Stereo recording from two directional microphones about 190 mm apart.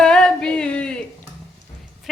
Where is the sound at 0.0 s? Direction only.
5° left (ahead or behind).